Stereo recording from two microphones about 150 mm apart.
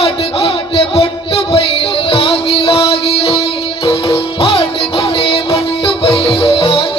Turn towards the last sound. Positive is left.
turn(degrees=40)  # may be behind; listen again after turning